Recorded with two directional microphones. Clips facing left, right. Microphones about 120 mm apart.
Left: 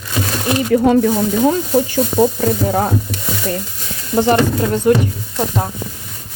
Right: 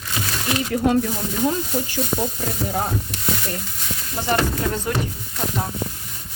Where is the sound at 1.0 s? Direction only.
90° left.